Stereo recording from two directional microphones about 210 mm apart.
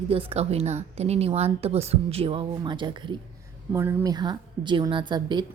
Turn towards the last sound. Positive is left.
turn(degrees=-20)  # may be behind; listen again after turning